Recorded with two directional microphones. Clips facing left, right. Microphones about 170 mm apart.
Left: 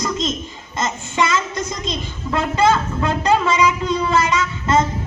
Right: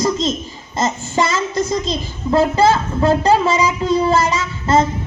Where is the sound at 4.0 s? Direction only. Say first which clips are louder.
Right 2 dB; 35° right (ahead or behind).